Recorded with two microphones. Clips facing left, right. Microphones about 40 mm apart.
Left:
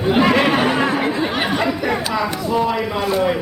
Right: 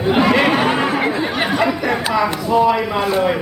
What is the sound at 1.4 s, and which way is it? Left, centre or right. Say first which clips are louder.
Speech: right 2 dB; centre.